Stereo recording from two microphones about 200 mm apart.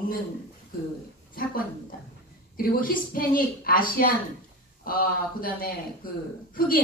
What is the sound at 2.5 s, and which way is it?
A woman's voice, 45° left (ahead or behind).